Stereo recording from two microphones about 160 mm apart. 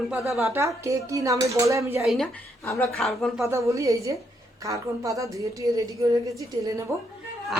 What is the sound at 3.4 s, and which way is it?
A woman's voice, 20° right (ahead or behind).